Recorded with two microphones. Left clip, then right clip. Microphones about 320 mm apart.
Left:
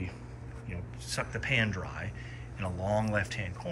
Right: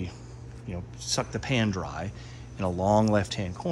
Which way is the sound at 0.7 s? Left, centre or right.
Centre.